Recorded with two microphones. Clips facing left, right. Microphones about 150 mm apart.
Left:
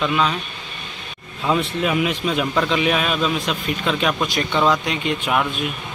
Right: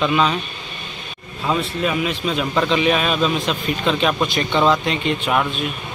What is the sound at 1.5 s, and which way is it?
Speech, 15° left (ahead or behind).